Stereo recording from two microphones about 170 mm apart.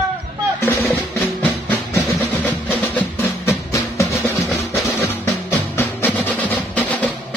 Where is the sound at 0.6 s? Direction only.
10° left (ahead or behind).